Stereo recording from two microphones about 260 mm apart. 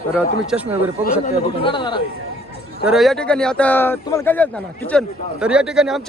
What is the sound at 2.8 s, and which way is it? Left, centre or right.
A man's voice, centre.